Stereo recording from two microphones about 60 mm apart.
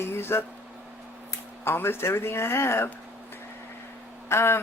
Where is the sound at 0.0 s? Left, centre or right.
Left.